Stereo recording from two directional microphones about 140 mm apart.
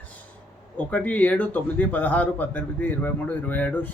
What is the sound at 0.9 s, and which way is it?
A man's voice, 10° left (ahead or behind).